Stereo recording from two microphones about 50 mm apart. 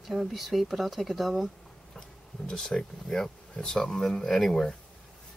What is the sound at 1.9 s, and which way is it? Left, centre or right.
Speech, centre.